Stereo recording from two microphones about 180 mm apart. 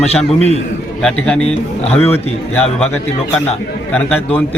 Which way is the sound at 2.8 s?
5° left (ahead or behind).